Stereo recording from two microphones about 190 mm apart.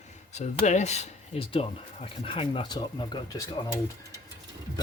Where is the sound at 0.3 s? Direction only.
40° left (ahead or behind); by 3.8 s 15° left (ahead or behind).